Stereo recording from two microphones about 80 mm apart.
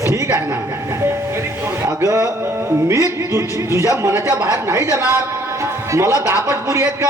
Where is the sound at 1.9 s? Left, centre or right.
Right.